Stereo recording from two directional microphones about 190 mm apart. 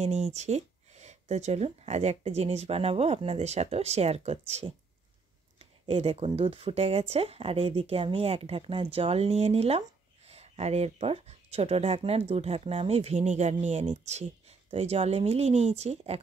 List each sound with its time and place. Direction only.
0.0 s speech: 35° right (ahead or behind)